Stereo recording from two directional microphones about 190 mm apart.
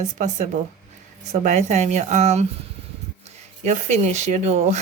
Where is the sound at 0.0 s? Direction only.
40° right (ahead or behind).